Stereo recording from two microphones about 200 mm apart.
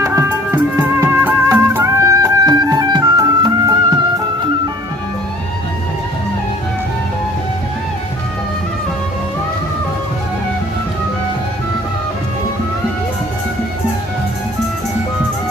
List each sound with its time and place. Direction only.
0.0 s music: 10° right (ahead or behind)